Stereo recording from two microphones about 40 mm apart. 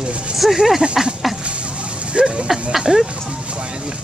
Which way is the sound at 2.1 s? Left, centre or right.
Right.